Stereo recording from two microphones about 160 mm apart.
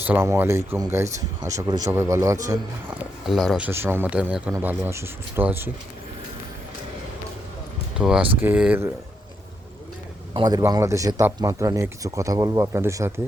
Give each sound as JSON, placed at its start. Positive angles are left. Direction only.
{"t": 0.0, "sound": "speech", "side_deg": -15}
{"t": 3.2, "sound": "speech", "side_deg": 0}
{"t": 3.7, "sound": "speech", "side_deg": -15}
{"t": 7.9, "sound": "speech", "side_deg": -5}
{"t": 10.3, "sound": "speech", "side_deg": -25}